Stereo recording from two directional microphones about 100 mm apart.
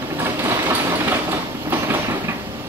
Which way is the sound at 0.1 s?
25° right (ahead or behind).